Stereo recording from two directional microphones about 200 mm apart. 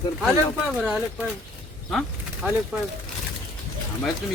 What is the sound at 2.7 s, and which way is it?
Speech, 5° right (ahead or behind).